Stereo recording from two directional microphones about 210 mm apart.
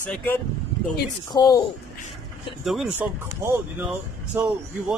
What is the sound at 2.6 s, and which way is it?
Speech, centre (ahead or behind).